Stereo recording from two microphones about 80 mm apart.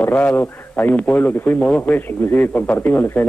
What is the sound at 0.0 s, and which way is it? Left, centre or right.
A man's voice, left.